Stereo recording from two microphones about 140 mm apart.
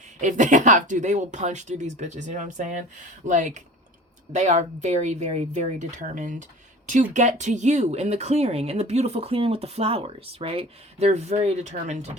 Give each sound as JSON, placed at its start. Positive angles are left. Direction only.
{"t": 0.2, "sound": "speech", "side_deg": -60}